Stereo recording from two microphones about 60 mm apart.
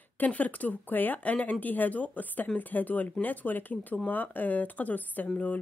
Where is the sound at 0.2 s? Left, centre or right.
Left.